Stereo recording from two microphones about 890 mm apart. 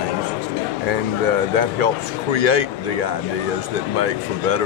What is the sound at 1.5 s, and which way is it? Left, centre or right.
Speech, left.